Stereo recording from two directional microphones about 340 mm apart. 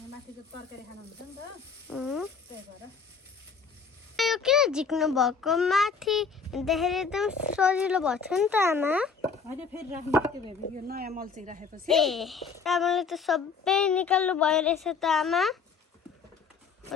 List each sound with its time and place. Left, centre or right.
1.9 s a child's voice: centre
4.2 s a child's voice: centre
10.8 s speech: right
11.9 s a child's voice: centre